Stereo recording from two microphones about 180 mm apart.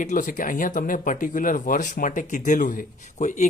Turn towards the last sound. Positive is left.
turn(degrees=45)  # may be behind; listen again after turning